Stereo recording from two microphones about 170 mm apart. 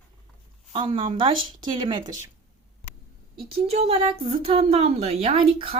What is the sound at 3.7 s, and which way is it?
A woman's voice, 35° right (ahead or behind).